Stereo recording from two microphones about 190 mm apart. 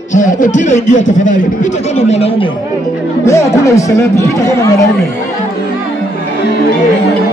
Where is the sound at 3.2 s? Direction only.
15° left (ahead or behind).